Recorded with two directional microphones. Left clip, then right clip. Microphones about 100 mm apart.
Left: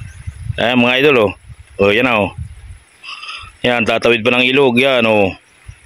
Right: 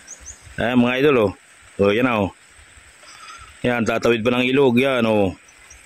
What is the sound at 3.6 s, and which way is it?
Speech, 5° left (ahead or behind).